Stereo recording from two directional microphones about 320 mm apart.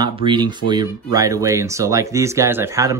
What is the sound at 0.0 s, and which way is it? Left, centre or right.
Speech, centre.